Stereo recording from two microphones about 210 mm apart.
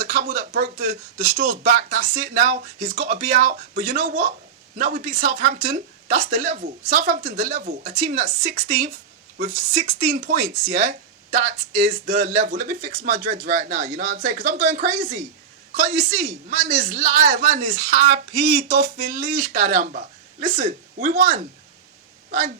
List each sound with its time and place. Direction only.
0.0 s speech: 40° right (ahead or behind)
5.6 s speech: 45° right (ahead or behind)
6.3 s speech: 30° right (ahead or behind)
18.3 s speech: 45° right (ahead or behind)